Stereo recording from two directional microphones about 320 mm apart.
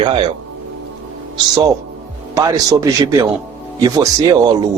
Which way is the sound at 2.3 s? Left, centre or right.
Centre.